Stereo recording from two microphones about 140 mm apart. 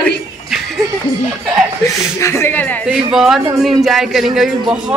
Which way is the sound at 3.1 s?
5° right (ahead or behind).